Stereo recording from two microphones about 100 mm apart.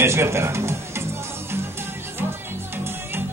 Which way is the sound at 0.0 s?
25° right (ahead or behind).